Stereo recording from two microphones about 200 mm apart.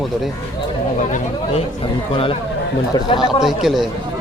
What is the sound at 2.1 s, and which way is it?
A man's voice, 25° left (ahead or behind).